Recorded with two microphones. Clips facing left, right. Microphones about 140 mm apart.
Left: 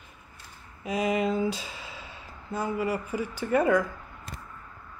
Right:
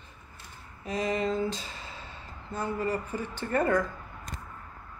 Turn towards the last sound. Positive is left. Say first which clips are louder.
# left 3 dB
turn(degrees=10)  # may be behind; listen again after turning